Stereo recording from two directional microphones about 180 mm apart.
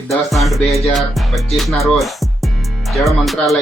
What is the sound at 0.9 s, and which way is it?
Music, centre (ahead or behind).